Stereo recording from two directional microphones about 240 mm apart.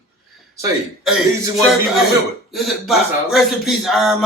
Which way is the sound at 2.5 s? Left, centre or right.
Centre.